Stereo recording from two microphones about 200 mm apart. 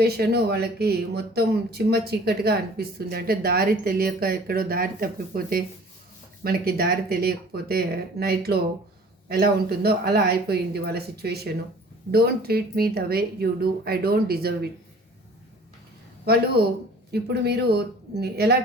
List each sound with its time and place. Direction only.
0.0 s speech: 55° right (ahead or behind)
16.2 s speech: 50° right (ahead or behind)